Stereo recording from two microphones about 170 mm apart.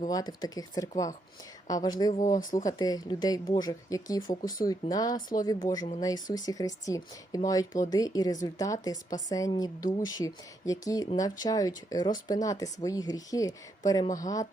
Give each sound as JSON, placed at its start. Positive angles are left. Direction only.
{"t": 0.1, "sound": "a woman's voice", "side_deg": 20}